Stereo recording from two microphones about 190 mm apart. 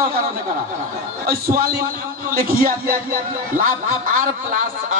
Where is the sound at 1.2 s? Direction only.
50° right (ahead or behind).